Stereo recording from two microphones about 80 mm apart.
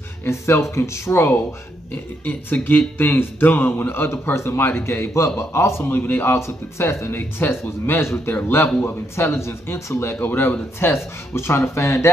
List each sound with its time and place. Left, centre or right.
0.2 s speech: left